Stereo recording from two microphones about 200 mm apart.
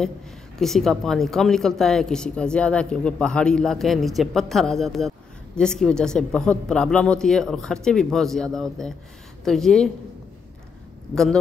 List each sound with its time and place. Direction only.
0.6 s speech: centre (ahead or behind)